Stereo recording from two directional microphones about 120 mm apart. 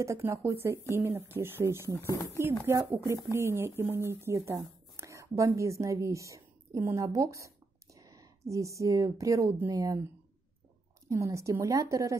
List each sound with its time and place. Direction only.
0.0 s speech: 25° right (ahead or behind)
11.1 s speech: 25° right (ahead or behind)